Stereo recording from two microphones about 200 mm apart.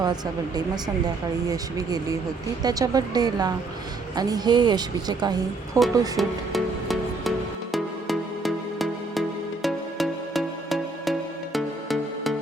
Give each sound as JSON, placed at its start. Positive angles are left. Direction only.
{"t": 0.0, "sound": "speech", "side_deg": -20}
{"t": 2.6, "sound": "speech", "side_deg": -20}
{"t": 6.1, "sound": "music", "side_deg": 0}